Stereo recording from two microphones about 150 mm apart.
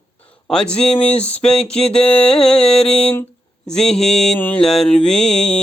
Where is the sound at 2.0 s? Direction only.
40° left (ahead or behind).